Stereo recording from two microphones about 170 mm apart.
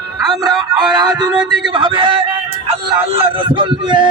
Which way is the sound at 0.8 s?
25° right (ahead or behind).